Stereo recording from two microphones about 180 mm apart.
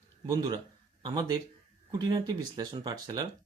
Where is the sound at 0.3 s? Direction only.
25° right (ahead or behind).